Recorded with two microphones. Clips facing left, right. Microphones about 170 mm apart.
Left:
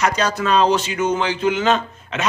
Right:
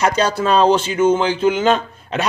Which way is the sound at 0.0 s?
30° right (ahead or behind).